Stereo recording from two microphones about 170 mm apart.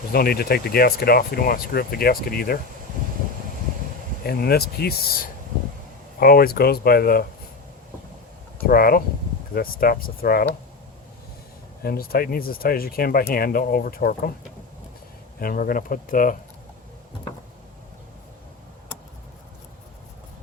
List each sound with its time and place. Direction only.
0.1 s speech: 65° left (ahead or behind)
4.3 s speech: 65° left (ahead or behind)
8.6 s speech: 60° left (ahead or behind)
11.8 s speech: 60° left (ahead or behind)
15.4 s speech: 55° left (ahead or behind)